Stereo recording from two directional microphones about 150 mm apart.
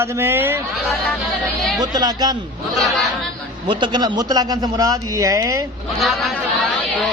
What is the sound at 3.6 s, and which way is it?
A man's voice, 30° right (ahead or behind).